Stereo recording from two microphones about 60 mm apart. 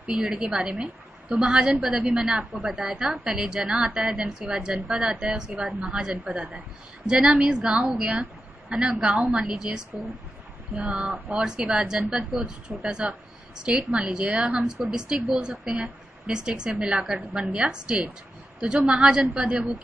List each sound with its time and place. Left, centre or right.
0.2 s a woman's voice: centre